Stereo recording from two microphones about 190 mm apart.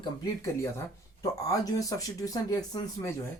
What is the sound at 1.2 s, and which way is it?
Speech, 20° left (ahead or behind).